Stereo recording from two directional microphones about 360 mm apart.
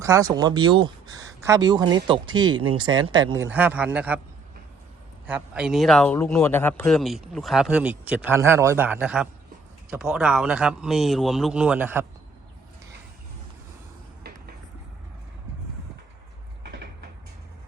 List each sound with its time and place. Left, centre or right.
0.0 s a man's voice: centre
5.2 s a man's voice: centre
14.3 s a sound: right